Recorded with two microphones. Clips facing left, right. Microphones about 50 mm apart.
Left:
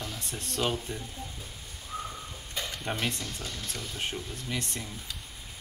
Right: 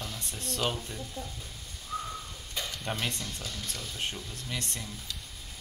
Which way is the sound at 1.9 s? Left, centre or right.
Centre.